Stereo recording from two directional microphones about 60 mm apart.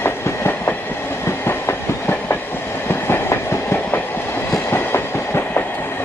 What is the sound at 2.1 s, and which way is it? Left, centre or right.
Train, left.